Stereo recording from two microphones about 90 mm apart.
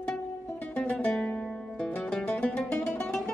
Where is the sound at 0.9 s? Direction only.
10° left (ahead or behind).